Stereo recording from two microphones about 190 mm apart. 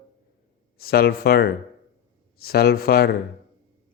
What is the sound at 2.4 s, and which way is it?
Mantra, 55° left (ahead or behind).